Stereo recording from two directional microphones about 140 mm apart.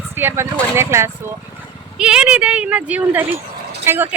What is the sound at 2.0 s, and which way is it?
Speech, 5° right (ahead or behind).